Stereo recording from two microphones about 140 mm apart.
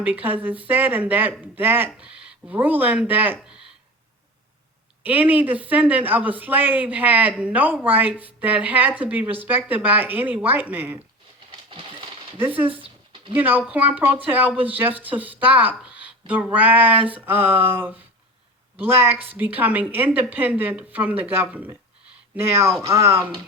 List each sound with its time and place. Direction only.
0.0 s speech: 10° right (ahead or behind)
5.0 s speech: 10° right (ahead or behind)
11.7 s coin: 40° right (ahead or behind)
12.4 s speech: 15° right (ahead or behind)
12.6 s a sound: 40° right (ahead or behind)
13.3 s speech: 15° right (ahead or behind)